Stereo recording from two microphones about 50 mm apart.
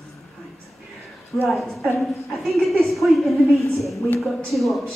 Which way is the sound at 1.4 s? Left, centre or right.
Centre.